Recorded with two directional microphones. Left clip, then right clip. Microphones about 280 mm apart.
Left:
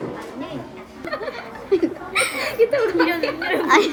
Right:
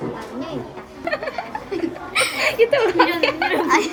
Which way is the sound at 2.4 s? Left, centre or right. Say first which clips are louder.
Right 3 dB; centre.